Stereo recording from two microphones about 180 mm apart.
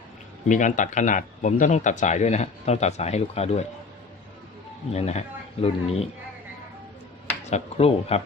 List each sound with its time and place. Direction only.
0.4 s speech: 45° left (ahead or behind)
4.9 s speech: 35° left (ahead or behind)
7.5 s speech: 35° left (ahead or behind)